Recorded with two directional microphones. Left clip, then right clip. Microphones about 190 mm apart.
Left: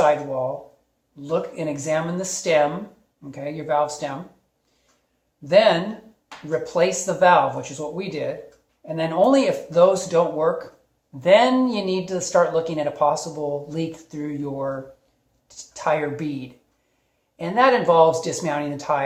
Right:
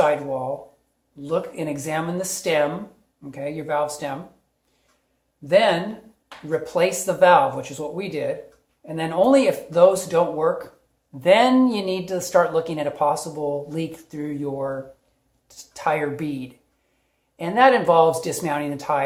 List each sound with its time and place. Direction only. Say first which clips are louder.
1.1 s speech: even; 30° right (ahead or behind)
5.5 s speech: left 2 dB; 25° right (ahead or behind)